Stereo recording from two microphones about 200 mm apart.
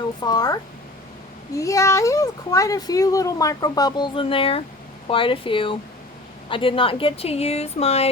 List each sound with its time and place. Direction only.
0.2 s speech: 20° left (ahead or behind)